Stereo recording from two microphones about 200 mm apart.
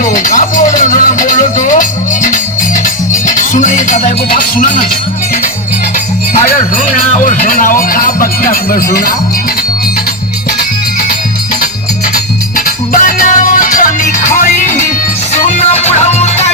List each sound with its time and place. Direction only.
0.0 s music: 40° left (ahead or behind)
7.3 s music: 45° left (ahead or behind)
12.5 s music: 45° left (ahead or behind)
15.9 s music: 30° left (ahead or behind)